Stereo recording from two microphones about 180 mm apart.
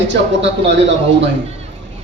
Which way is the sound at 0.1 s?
90° right.